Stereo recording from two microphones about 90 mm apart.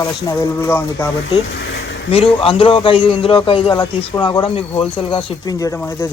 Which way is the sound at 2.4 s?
85° left.